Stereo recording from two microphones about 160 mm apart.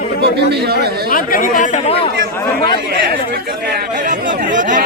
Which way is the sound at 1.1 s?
60° left (ahead or behind).